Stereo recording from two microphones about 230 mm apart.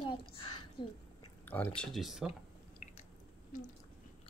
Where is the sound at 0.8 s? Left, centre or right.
Left.